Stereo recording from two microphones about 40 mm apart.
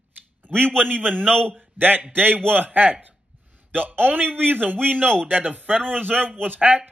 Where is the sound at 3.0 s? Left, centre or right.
Right.